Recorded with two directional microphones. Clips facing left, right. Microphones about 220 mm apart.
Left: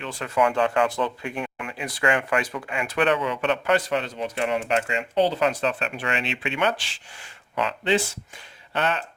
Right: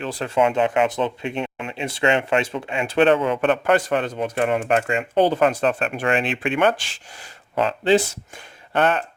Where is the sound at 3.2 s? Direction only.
50° right (ahead or behind).